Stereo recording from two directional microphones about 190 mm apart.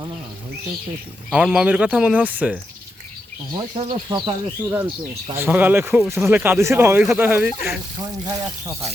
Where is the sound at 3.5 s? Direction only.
25° right (ahead or behind).